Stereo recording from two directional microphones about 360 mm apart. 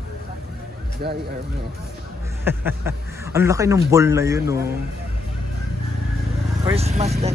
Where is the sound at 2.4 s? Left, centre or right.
Centre.